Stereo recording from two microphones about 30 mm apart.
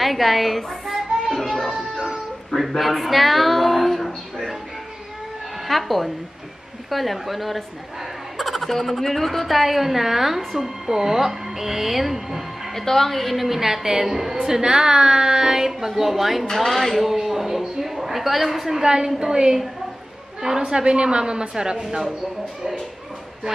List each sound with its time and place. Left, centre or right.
0.0 s speech: centre
2.8 s a sound: centre
5.7 s a woman's voice: centre
12.7 s a woman's voice: centre
14.6 s a woman's voice: right; by 16.4 s centre
16.5 s speech: centre
17.1 s a sound: centre
18.8 s a woman's voice: right
20.6 s a woman's voice: right
21.8 s a woman's voice: centre